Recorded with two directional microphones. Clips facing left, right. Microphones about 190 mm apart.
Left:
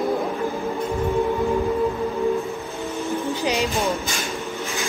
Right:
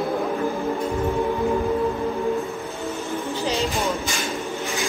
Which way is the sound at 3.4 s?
15° left (ahead or behind).